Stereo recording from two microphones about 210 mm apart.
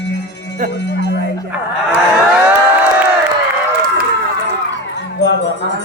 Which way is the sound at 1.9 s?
5° right (ahead or behind).